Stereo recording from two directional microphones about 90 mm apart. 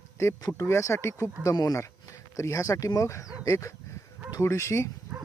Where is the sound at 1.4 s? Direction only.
40° left (ahead or behind).